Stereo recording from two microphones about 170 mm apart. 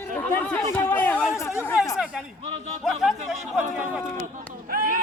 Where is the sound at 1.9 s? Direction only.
5° right (ahead or behind).